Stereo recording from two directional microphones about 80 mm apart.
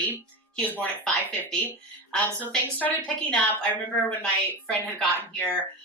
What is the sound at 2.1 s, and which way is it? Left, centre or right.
A woman's voice, centre.